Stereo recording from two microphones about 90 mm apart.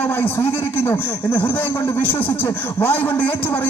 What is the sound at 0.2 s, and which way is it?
A man's voice, 25° left (ahead or behind).